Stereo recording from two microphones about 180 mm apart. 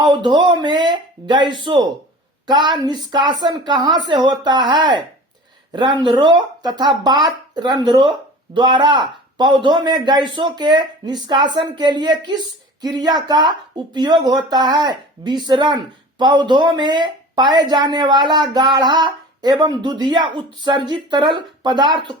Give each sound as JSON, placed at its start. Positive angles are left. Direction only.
{"t": 0.0, "sound": "speech", "side_deg": -25}